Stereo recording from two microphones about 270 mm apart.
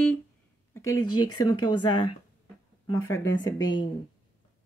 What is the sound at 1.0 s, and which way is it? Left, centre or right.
Speech, left.